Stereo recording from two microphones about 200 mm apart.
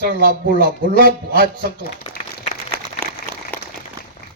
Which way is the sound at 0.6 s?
45° right (ahead or behind).